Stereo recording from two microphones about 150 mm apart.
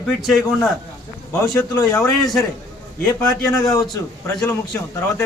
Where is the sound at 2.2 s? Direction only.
5° left (ahead or behind).